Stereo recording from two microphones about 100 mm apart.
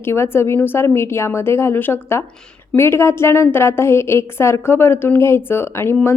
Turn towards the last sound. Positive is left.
turn(degrees=25)  # may be behind; listen again after turning